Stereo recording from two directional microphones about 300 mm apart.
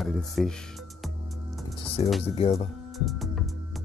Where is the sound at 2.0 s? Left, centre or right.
Centre.